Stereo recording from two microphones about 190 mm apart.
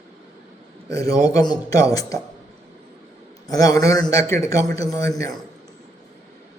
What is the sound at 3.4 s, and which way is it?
A man's voice, 20° left (ahead or behind).